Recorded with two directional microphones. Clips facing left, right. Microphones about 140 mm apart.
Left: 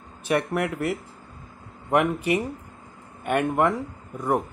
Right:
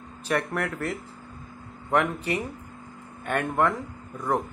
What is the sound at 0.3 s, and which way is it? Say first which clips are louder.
Speech: left 3 dB; 10° left (ahead or behind).